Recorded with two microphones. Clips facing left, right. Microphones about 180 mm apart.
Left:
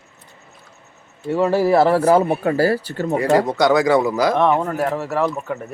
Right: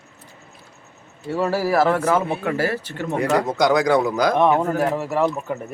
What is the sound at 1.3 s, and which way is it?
Speech, 20° left (ahead or behind).